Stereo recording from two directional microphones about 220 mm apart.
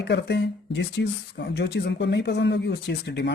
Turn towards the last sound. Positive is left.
turn(degrees=50)  # may be behind; listen again after turning